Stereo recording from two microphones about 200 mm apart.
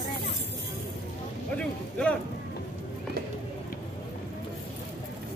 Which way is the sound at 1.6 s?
5° left (ahead or behind).